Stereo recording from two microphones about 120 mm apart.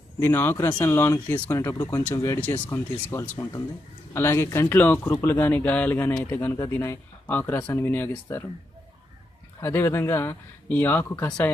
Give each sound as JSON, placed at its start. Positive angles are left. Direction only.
{"t": 0.2, "sound": "speech", "side_deg": 20}
{"t": 9.6, "sound": "speech", "side_deg": 20}